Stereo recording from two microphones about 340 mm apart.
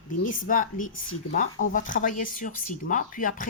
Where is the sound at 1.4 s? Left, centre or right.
Left.